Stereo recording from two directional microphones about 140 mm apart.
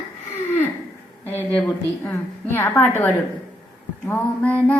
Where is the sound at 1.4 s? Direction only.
10° left (ahead or behind).